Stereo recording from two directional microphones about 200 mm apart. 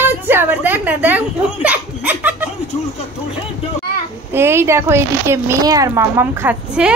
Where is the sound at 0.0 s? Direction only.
10° right (ahead or behind).